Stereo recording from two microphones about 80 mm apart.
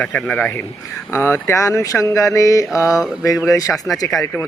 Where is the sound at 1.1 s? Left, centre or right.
Left.